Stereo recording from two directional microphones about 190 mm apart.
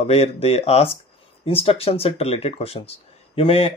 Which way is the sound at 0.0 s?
35° left (ahead or behind).